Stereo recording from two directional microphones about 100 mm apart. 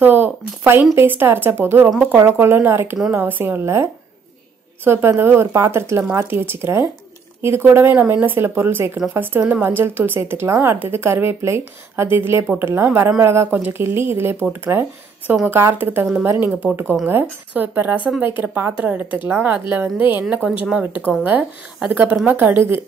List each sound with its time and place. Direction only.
0.0 s a woman's voice: 20° right (ahead or behind)